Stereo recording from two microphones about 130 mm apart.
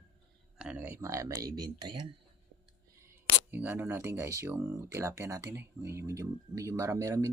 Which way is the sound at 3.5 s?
15° right (ahead or behind).